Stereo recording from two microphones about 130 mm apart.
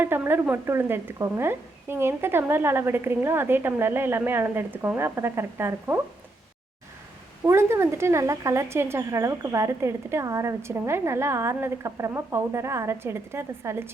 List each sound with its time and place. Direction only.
0.0 s speech: 15° right (ahead or behind)
7.4 s speech: 20° right (ahead or behind)